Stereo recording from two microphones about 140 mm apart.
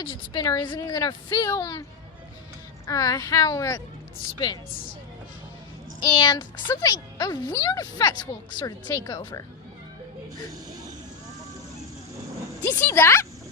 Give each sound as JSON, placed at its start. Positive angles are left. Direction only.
{"t": 0.0, "sound": "speech", "side_deg": 30}
{"t": 2.8, "sound": "speech", "side_deg": 25}
{"t": 6.0, "sound": "speech", "side_deg": 30}
{"t": 10.7, "sound": "vehicle", "side_deg": -25}
{"t": 12.6, "sound": "speech", "side_deg": 15}